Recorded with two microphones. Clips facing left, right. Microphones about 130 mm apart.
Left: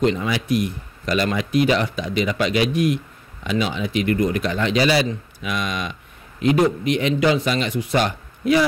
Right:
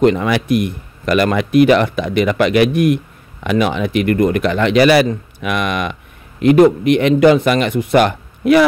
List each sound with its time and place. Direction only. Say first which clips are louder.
0.0 s speech: right 7 dB; 60° right (ahead or behind)